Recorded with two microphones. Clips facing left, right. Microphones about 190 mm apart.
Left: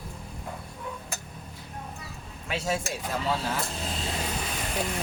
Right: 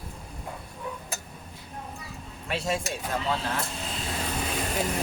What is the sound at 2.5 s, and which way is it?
Speech, centre (ahead or behind).